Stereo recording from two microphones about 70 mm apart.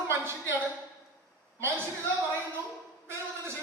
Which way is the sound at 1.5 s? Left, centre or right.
Right.